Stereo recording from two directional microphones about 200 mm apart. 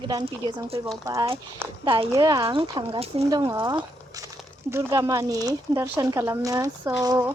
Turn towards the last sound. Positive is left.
turn(degrees=-15)  # may be behind; listen again after turning